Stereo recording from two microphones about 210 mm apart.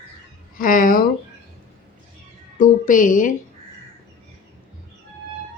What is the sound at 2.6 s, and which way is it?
Speech, 40° left (ahead or behind).